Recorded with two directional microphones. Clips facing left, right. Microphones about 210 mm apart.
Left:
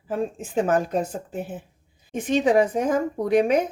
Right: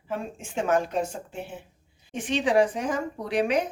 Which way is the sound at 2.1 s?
50° left (ahead or behind).